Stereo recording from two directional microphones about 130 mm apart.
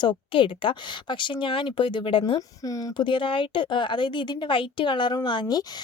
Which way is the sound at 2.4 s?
25° left (ahead or behind).